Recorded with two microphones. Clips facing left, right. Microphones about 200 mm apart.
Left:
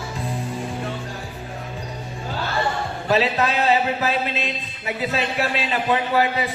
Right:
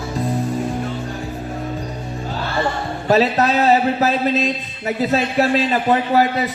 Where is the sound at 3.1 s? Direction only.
40° right (ahead or behind).